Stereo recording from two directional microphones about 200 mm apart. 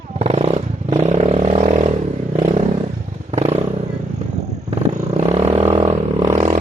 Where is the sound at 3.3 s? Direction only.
30° right (ahead or behind).